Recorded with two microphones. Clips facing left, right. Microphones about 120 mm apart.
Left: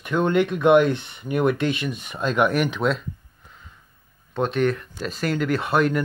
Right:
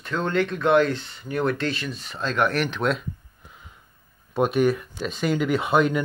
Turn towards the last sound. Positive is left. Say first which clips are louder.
# even
turn(degrees=0)  # may be behind; listen again after turning